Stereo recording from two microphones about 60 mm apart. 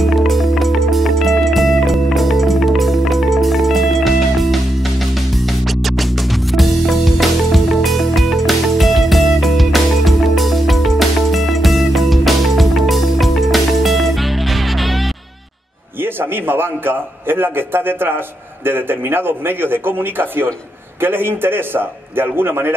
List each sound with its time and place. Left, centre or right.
0.0 s music: centre
16.0 s a man's voice: right